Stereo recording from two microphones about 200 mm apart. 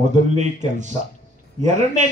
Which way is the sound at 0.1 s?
35° right (ahead or behind).